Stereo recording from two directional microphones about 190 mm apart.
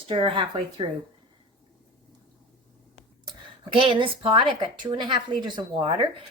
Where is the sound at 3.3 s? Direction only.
25° right (ahead or behind).